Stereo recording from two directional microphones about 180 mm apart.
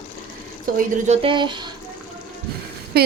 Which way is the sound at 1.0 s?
30° right (ahead or behind).